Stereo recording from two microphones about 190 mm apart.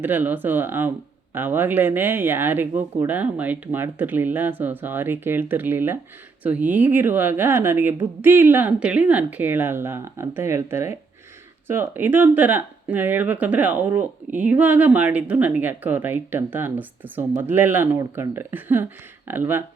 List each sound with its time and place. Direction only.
0.0 s speech: 10° right (ahead or behind)